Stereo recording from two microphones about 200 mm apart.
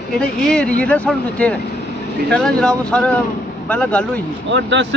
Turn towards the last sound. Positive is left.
turn(degrees=-65)  # may be behind; listen again after turning